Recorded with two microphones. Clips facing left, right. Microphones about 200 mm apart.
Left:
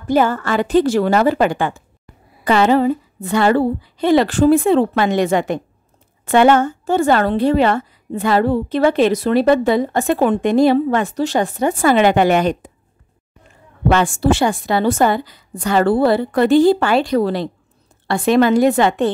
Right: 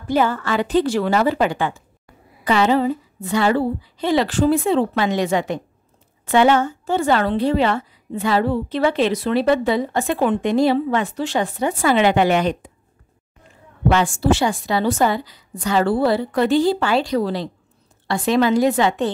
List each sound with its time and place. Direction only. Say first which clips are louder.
0.1 s a woman's voice: left 3 dB; 45° left (ahead or behind)
13.8 s a woman's voice: left 2 dB; 55° left (ahead or behind)